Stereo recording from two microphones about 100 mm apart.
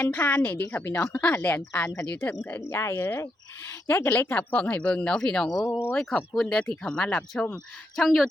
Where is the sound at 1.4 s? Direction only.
20° left (ahead or behind).